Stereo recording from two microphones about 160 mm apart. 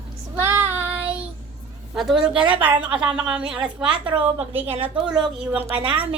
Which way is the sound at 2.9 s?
30° right (ahead or behind).